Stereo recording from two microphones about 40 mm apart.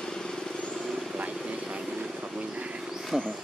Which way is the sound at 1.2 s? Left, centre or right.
Right.